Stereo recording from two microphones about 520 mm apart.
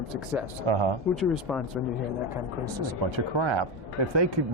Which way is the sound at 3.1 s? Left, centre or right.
Right.